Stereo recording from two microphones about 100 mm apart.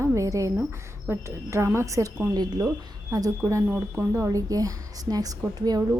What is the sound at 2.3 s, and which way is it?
A woman's voice, 45° right (ahead or behind).